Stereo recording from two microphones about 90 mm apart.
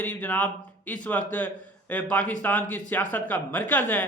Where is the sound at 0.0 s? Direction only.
20° left (ahead or behind).